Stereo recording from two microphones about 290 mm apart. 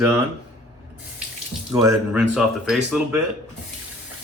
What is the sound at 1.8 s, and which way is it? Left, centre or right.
Speech, centre.